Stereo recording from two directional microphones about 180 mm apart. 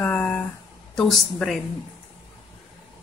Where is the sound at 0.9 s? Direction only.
Centre (ahead or behind).